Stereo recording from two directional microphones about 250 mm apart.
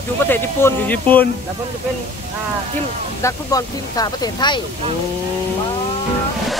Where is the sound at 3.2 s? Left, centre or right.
Centre.